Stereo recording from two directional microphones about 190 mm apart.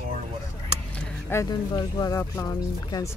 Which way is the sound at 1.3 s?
15° left (ahead or behind).